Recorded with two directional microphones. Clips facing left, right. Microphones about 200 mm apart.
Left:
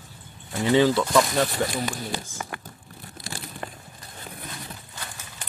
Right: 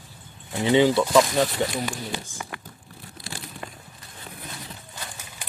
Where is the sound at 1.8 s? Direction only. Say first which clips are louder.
Even; 40° left (ahead or behind).